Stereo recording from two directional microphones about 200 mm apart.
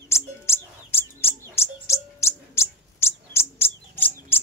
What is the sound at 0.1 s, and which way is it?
Bird, 10° left (ahead or behind).